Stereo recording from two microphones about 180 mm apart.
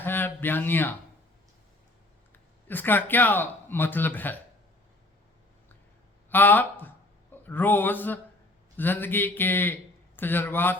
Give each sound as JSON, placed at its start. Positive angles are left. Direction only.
{"t": 0.0, "sound": "speech", "side_deg": 10}
{"t": 2.3, "sound": "speech", "side_deg": 10}
{"t": 6.3, "sound": "a man's voice", "side_deg": 10}